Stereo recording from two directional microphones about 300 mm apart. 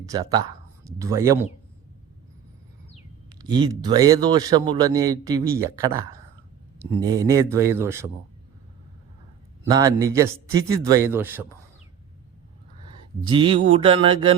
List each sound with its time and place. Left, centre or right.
0.1 s speech: centre
3.2 s a man's voice: centre
9.6 s a man's voice: centre
13.2 s a man's voice: centre